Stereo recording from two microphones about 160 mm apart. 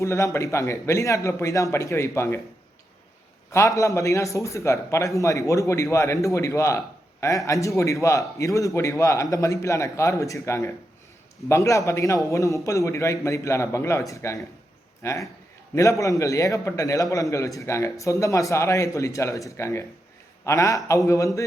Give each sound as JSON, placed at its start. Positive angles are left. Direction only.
{"t": 0.0, "sound": "a man's voice", "side_deg": 20}
{"t": 3.5, "sound": "a man's voice", "side_deg": 20}